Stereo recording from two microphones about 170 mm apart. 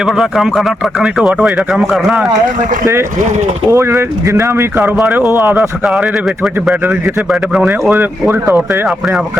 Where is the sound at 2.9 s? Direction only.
15° right (ahead or behind).